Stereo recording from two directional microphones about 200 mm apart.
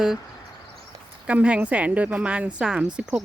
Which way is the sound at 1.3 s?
5° right (ahead or behind).